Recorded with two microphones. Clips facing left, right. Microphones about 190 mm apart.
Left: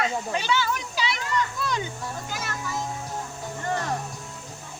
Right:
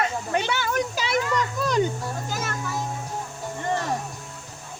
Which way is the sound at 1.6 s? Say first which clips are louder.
Right 7 dB; 45° right (ahead or behind).